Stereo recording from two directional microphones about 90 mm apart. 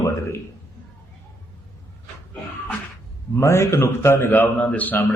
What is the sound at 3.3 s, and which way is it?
A man's voice, 30° left (ahead or behind).